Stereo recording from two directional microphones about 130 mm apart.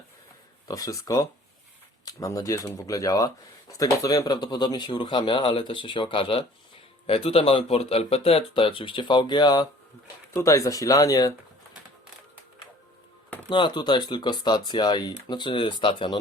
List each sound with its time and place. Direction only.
0.7 s speech: 25° left (ahead or behind)
13.5 s speech: 40° left (ahead or behind)